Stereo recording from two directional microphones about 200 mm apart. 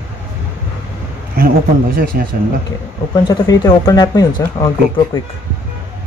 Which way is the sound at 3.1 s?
20° left (ahead or behind).